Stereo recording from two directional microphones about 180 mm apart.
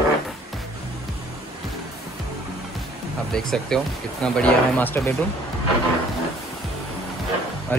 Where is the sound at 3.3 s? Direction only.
5° left (ahead or behind).